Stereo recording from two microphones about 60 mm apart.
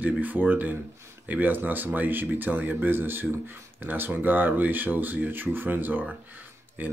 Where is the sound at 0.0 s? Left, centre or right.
Right.